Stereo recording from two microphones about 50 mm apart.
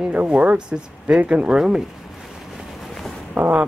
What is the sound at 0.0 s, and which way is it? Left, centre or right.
Speech, right.